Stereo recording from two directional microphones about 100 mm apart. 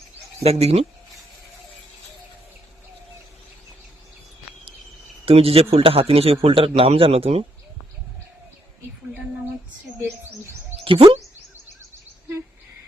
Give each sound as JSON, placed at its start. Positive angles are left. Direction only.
{"t": 0.4, "sound": "speech", "side_deg": -90}
{"t": 5.2, "sound": "a man's voice", "side_deg": -75}
{"t": 10.0, "sound": "speech", "side_deg": -25}
{"t": 10.8, "sound": "speech", "side_deg": -65}